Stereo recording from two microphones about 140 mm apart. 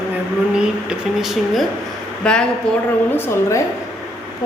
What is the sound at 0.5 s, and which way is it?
A woman's voice, 5° right (ahead or behind).